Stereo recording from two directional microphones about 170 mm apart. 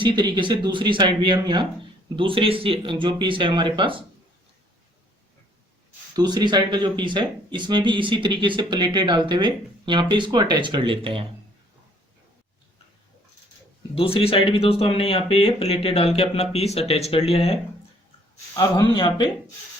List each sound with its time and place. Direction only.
0.0 s speech: 30° right (ahead or behind)
6.1 s speech: 25° right (ahead or behind)
13.9 s speech: 35° left (ahead or behind)
18.5 s speech: 25° left (ahead or behind)